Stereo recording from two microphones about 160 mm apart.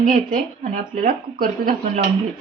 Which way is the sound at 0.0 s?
60° right (ahead or behind).